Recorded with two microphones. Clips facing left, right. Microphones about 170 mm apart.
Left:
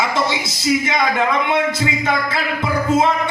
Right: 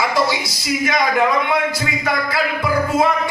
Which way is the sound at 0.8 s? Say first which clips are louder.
Right 1 dB; 25° left (ahead or behind).